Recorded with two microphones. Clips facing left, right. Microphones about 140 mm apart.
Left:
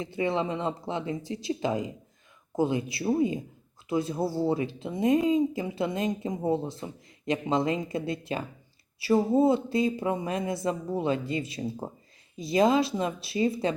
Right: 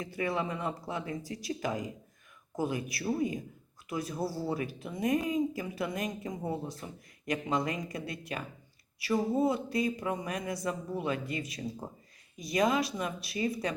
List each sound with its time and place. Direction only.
0.0 s speech: 25° left (ahead or behind)